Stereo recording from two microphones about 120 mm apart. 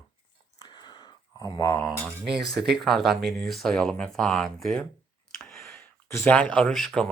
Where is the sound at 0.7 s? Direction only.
40° left (ahead or behind).